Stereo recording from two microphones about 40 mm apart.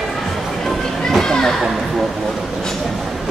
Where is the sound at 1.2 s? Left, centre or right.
Centre.